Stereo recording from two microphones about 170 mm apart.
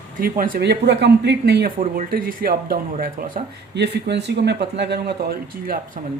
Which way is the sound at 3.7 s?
75° right (ahead or behind).